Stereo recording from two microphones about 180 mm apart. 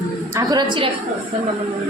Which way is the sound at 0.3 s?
25° right (ahead or behind).